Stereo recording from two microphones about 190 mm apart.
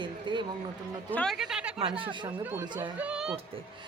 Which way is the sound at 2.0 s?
25° right (ahead or behind).